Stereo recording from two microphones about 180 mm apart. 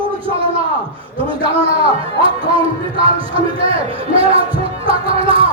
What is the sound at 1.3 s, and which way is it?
A man's voice, 30° right (ahead or behind).